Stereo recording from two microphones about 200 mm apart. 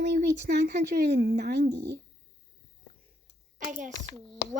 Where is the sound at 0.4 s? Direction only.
55° right (ahead or behind).